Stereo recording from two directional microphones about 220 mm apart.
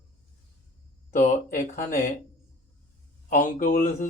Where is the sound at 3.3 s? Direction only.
35° left (ahead or behind).